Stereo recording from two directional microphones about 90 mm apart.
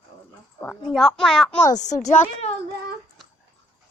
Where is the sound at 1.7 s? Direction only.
40° left (ahead or behind).